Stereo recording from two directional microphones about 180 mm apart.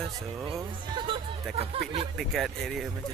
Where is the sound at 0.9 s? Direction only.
25° right (ahead or behind).